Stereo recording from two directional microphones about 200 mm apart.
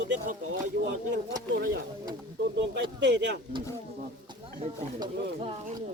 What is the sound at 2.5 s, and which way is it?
Speech, 60° right (ahead or behind).